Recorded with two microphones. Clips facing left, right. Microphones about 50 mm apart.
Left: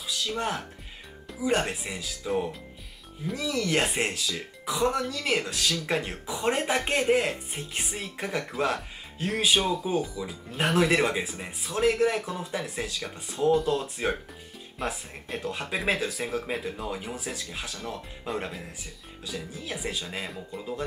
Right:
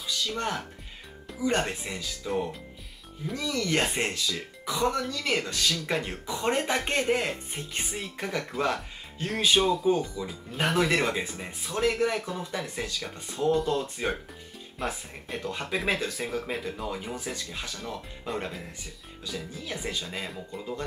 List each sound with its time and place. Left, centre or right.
0.1 s speech: centre